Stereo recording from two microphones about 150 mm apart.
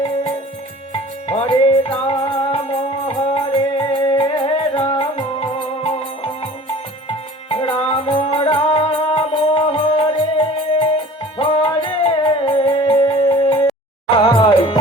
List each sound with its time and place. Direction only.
1.3 s music: 45° left (ahead or behind)
7.5 s music: 40° left (ahead or behind)